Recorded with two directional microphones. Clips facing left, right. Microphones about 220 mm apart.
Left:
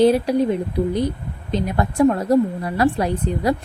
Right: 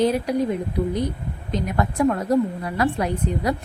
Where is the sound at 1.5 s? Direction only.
30° left (ahead or behind).